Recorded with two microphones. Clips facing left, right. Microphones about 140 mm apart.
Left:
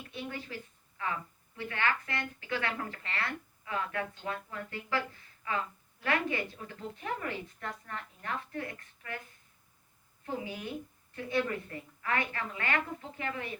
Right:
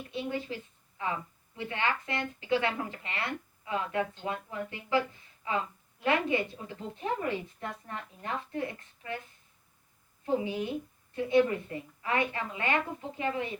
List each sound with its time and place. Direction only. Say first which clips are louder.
0.1 s a woman's voice: right 6 dB; 20° right (ahead or behind)
10.2 s a woman's voice: right 7 dB; 20° right (ahead or behind)